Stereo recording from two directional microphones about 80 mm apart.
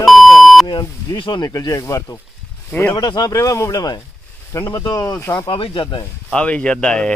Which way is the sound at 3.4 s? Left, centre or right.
Left.